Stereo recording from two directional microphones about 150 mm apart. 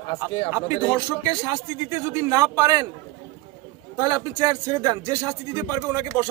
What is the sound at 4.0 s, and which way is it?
A man's voice, 25° right (ahead or behind).